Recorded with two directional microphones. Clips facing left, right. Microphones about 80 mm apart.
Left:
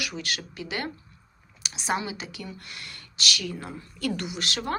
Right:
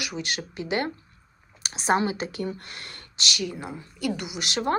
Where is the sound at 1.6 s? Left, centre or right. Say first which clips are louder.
Right 6 dB; right.